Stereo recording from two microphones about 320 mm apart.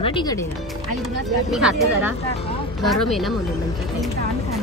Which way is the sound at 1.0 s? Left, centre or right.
Centre.